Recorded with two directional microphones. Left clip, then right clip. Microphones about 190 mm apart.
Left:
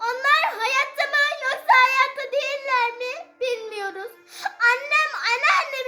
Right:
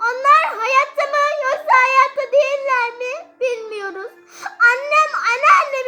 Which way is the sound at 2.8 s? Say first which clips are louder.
Right 3 dB; 40° left (ahead or behind).